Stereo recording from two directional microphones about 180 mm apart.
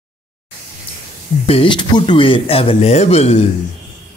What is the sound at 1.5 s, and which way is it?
Speech, 30° left (ahead or behind).